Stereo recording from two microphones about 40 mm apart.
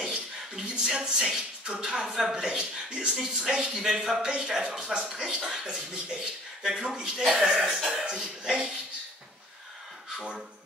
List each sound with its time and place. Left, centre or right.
0.0 s a sound: centre
1.8 s a man's voice: right
7.5 s music: centre
7.9 s a man's voice: right